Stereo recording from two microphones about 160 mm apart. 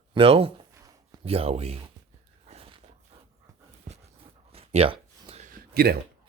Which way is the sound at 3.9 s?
45° right (ahead or behind).